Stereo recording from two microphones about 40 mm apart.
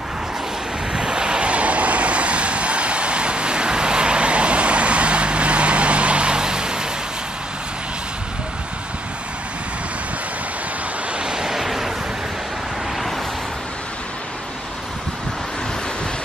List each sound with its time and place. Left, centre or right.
0.9 s vehicle: right
11.1 s vehicle: centre
11.6 s a sound: centre